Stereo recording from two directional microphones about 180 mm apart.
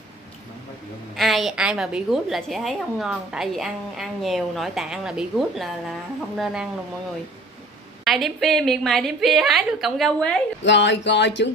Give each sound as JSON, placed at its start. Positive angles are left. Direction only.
{"t": 1.1, "sound": "a woman's voice", "side_deg": 0}
{"t": 8.0, "sound": "a woman's voice", "side_deg": 0}
{"t": 10.6, "sound": "a sound", "side_deg": 80}